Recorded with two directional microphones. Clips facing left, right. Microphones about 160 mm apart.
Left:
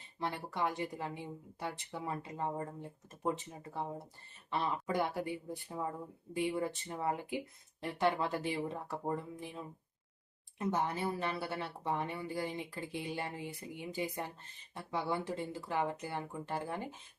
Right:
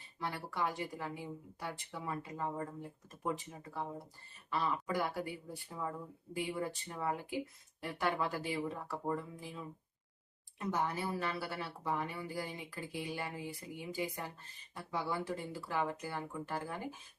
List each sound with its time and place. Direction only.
0.2 s speech: 20° left (ahead or behind)